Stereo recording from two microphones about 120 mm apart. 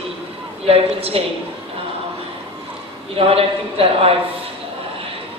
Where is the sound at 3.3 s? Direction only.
55° right (ahead or behind).